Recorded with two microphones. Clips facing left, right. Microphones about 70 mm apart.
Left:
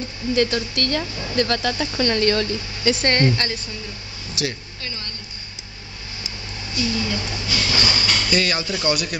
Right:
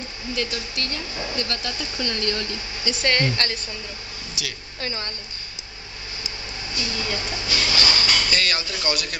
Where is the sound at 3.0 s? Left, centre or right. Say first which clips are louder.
Even; left.